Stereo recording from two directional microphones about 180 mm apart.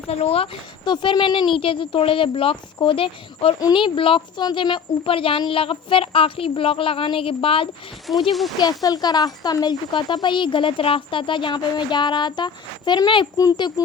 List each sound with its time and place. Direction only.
0.1 s a child's voice: 35° left (ahead or behind)
8.1 s speech: centre (ahead or behind)
8.8 s a child's voice: 20° left (ahead or behind)